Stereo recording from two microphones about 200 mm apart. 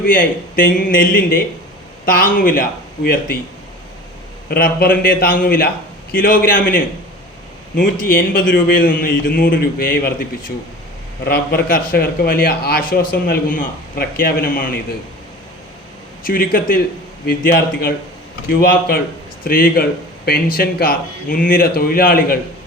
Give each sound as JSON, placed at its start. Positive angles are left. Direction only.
{"t": 0.0, "sound": "a man's voice", "side_deg": 45}
{"t": 4.4, "sound": "a man's voice", "side_deg": 50}
{"t": 8.0, "sound": "a man's voice", "side_deg": 45}
{"t": 11.3, "sound": "a man's voice", "side_deg": 45}
{"t": 16.2, "sound": "a man's voice", "side_deg": 45}